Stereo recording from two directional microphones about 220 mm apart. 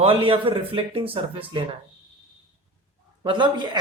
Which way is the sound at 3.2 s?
20° right (ahead or behind).